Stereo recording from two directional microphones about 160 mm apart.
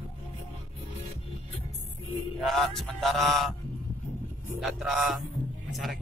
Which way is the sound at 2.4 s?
Centre (ahead or behind).